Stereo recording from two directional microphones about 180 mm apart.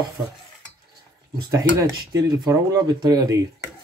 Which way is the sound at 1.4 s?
20° right (ahead or behind).